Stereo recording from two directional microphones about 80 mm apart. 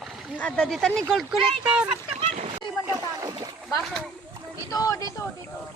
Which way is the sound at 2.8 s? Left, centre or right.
Right.